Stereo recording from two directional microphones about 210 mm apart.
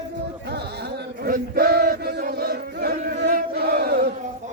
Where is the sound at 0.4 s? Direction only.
50° right (ahead or behind).